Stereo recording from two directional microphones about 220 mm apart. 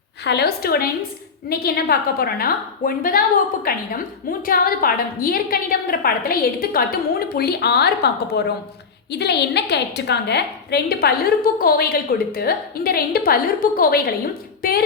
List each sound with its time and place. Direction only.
0.3 s a woman's voice: 45° left (ahead or behind)